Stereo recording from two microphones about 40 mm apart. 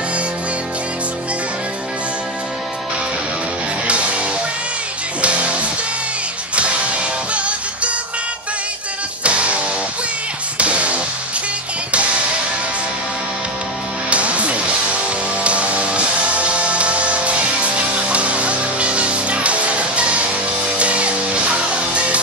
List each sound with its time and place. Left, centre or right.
3.8 s music: right
5.2 s music: right
9.2 s music: right
10.6 s music: right
14.1 s music: right